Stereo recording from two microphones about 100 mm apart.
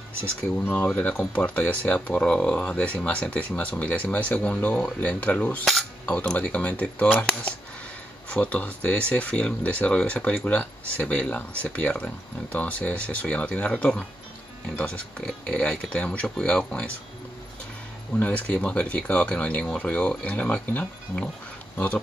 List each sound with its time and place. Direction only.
0.6 s speech: 15° left (ahead or behind)
18.1 s speech: 15° left (ahead or behind)